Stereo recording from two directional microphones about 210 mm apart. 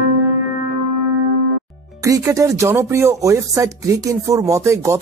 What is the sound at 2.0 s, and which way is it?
Speech, 15° right (ahead or behind).